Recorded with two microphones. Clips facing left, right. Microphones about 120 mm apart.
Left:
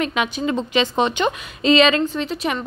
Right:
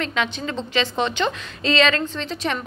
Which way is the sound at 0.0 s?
15° left (ahead or behind).